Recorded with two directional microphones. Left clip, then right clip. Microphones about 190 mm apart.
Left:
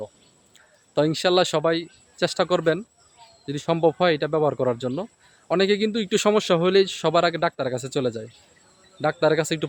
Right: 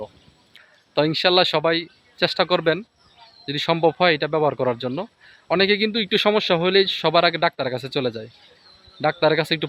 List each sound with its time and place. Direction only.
0.5 s a man's voice: 5° left (ahead or behind)